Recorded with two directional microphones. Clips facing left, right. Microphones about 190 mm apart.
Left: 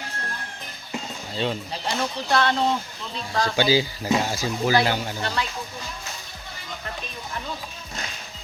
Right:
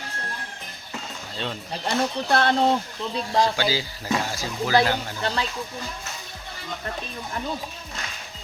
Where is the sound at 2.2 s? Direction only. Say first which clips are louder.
Right 3 dB; 55° right (ahead or behind).